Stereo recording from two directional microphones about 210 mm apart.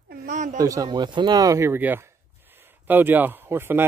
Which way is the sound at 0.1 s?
40° right (ahead or behind).